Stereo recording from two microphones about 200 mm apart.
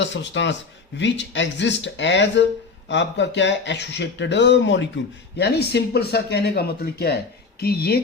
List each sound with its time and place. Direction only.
0.0 s speech: 60° left (ahead or behind)